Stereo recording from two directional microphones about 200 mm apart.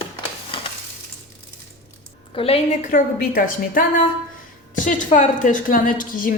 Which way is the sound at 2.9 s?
45° left (ahead or behind).